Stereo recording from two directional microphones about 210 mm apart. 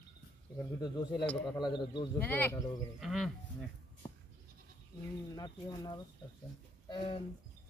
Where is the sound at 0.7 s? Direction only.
20° left (ahead or behind).